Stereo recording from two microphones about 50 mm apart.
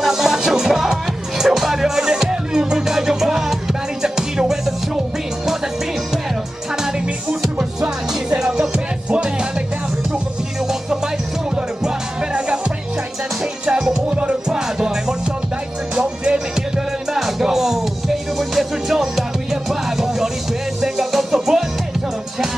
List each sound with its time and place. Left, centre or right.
0.0 s music: centre
6.8 s music: centre
9.1 s music: right
11.5 s music: centre